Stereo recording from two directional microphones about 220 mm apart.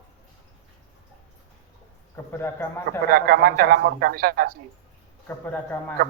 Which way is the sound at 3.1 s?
45° right (ahead or behind).